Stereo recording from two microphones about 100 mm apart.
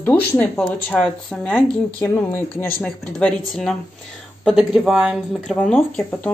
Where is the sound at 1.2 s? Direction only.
10° left (ahead or behind).